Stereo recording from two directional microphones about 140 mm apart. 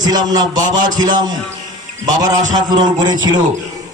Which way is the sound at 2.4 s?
60° right (ahead or behind).